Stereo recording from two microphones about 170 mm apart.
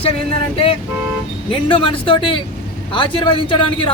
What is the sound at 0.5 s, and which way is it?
Speech, 35° left (ahead or behind).